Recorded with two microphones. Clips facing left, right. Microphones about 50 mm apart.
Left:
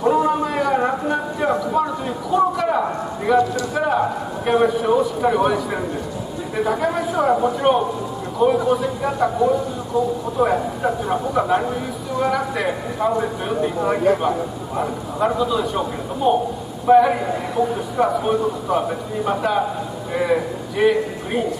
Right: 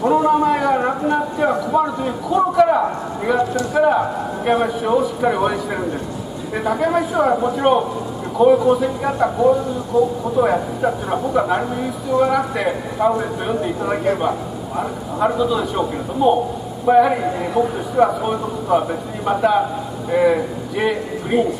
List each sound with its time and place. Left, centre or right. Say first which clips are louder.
0.0 s a sound: right 3 dB; centre
3.3 s speech: left 1 dB; centre
10.4 s a man's voice: right 1 dB; centre
17.6 s speech: right 2 dB; centre
17.9 s speech: right 2 dB; centre